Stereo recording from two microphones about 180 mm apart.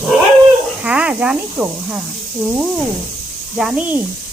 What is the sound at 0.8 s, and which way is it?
Speech, 5° right (ahead or behind).